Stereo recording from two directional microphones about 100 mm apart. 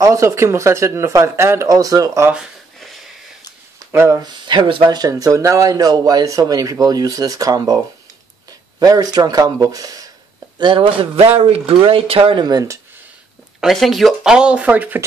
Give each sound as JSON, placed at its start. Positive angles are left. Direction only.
{"t": 0.0, "sound": "speech", "side_deg": -30}
{"t": 3.8, "sound": "speech", "side_deg": -30}
{"t": 4.2, "sound": "speech", "side_deg": -50}
{"t": 4.9, "sound": "speech", "side_deg": -35}
{"t": 10.6, "sound": "speech", "side_deg": -55}
{"t": 11.3, "sound": "speech", "side_deg": -75}
{"t": 12.4, "sound": "speech", "side_deg": -35}
{"t": 13.6, "sound": "speech", "side_deg": 0}